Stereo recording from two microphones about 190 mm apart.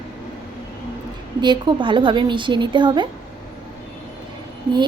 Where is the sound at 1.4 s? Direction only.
25° right (ahead or behind).